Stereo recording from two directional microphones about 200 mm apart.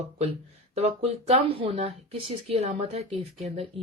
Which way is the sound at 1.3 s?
25° right (ahead or behind).